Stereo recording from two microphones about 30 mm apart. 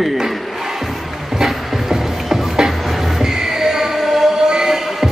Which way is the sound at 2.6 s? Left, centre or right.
Centre.